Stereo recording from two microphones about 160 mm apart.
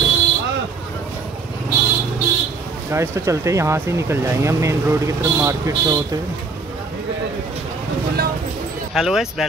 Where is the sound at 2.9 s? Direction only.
15° right (ahead or behind).